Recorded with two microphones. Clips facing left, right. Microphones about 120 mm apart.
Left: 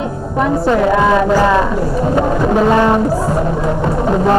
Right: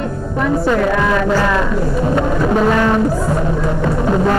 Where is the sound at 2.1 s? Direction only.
10° left (ahead or behind).